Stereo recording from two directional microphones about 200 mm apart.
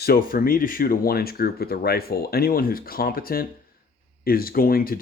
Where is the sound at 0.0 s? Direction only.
50° left (ahead or behind).